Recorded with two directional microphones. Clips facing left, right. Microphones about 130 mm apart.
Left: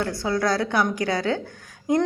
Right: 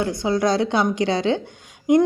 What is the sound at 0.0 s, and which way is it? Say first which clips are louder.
A woman's voice: right 3 dB; 20° right (ahead or behind).